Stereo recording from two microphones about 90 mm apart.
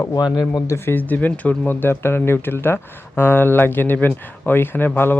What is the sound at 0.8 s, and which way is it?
Speech, 20° left (ahead or behind).